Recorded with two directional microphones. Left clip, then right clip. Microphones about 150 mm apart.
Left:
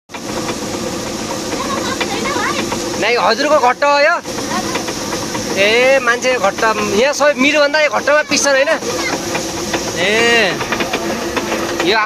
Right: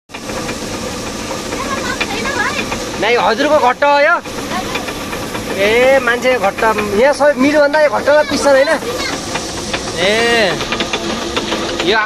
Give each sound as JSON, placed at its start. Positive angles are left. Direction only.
{"t": 3.0, "sound": "speech", "side_deg": 5}
{"t": 5.6, "sound": "speech", "side_deg": 5}
{"t": 7.4, "sound": "a man's voice", "side_deg": 25}
{"t": 9.9, "sound": "speech", "side_deg": 0}